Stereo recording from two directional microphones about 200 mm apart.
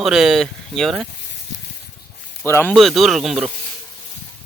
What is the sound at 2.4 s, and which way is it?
Speech, 10° left (ahead or behind).